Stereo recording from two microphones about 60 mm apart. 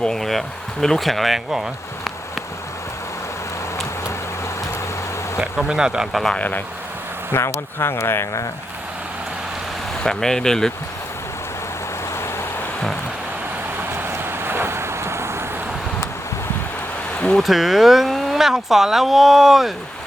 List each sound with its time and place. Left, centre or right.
0.0 s speech: centre
5.4 s speech: centre
7.3 s speech: left
10.0 s speech: centre
13.9 s vehicle: right
17.3 s speech: centre